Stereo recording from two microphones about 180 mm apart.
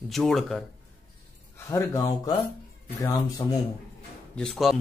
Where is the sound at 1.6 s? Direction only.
15° left (ahead or behind).